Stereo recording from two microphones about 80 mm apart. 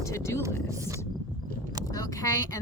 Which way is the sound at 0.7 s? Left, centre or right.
Right.